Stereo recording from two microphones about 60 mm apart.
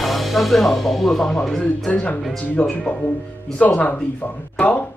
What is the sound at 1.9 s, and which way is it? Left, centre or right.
Speech, left.